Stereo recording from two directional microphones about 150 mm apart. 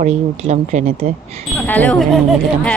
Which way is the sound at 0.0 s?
50° right (ahead or behind).